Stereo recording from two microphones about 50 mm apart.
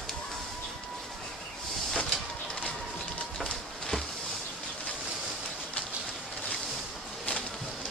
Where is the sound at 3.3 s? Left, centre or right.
Centre.